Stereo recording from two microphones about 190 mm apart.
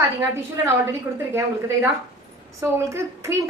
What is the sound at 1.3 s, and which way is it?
A woman's voice, 15° right (ahead or behind).